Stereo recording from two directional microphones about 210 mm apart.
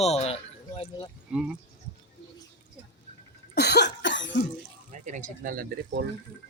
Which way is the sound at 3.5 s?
50° left (ahead or behind).